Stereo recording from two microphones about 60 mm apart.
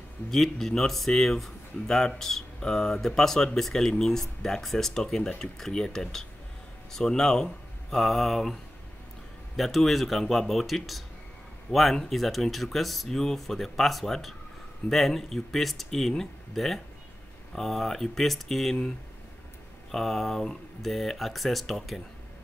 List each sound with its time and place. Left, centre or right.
0.3 s speech: centre
9.6 s speech: centre